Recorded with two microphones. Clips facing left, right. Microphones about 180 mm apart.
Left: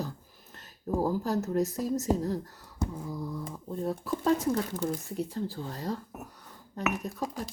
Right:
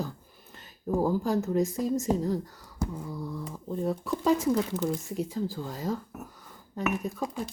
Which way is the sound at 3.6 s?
Centre (ahead or behind).